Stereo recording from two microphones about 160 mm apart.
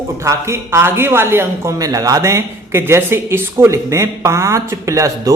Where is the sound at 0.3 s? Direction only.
15° right (ahead or behind).